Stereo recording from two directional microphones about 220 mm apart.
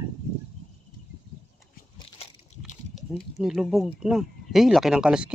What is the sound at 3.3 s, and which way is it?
Speech, centre (ahead or behind).